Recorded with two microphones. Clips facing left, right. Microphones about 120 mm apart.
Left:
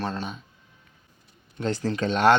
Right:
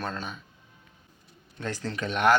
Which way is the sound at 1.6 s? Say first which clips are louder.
Left 6 dB; 25° left (ahead or behind).